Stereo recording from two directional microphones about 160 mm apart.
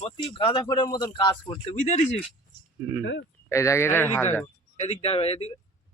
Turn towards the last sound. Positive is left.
turn(degrees=40)  # may be behind; listen again after turning